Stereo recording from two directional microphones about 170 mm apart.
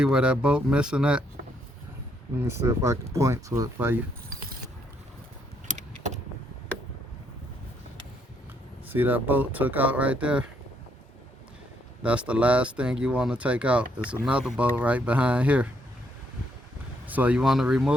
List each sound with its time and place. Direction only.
0.0 s speech: 5° right (ahead or behind)
2.4 s speech: 15° right (ahead or behind)
8.9 s speech: 10° right (ahead or behind)
12.0 s speech: 10° right (ahead or behind)
17.1 s speech: 10° right (ahead or behind)